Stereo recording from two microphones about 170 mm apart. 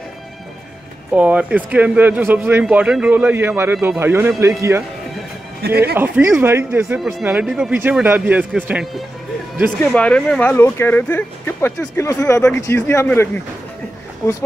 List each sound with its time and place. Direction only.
1.1 s a man's voice: 10° right (ahead or behind)
5.6 s speech: 65° right (ahead or behind)
5.9 s a man's voice: 10° right (ahead or behind)
9.9 s speech: 5° left (ahead or behind)